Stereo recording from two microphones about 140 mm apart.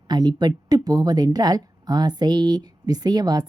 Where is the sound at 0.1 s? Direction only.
30° right (ahead or behind).